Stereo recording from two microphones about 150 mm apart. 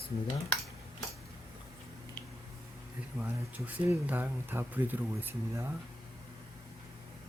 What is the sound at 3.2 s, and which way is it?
Speech, 10° right (ahead or behind).